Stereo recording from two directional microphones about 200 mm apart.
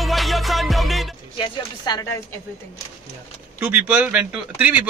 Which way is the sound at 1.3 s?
20° left (ahead or behind).